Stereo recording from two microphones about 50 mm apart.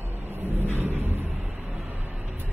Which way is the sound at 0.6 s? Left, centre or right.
Right.